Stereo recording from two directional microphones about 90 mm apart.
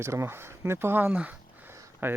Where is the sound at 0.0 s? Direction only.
30° right (ahead or behind); by 1.7 s 15° right (ahead or behind).